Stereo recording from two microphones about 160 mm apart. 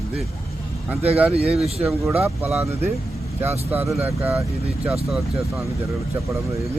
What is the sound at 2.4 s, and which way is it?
Speech, 15° right (ahead or behind).